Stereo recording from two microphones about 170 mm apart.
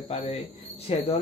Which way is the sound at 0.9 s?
35° left (ahead or behind).